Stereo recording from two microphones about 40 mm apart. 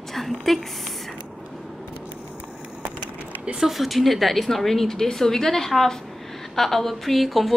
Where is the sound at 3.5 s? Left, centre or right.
Centre.